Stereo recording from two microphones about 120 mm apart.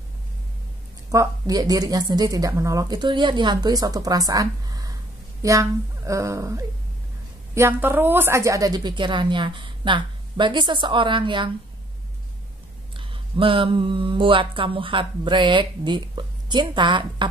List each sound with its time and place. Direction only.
1.1 s a woman's voice: 30° right (ahead or behind)
3.0 s a woman's voice: 40° right (ahead or behind)
12.9 s speech: 45° right (ahead or behind)